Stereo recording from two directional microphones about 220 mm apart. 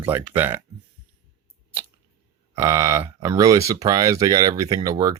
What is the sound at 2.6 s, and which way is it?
Speech, 15° right (ahead or behind).